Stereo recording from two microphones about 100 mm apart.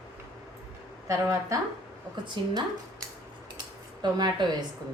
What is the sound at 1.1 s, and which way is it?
Speech, 30° right (ahead or behind).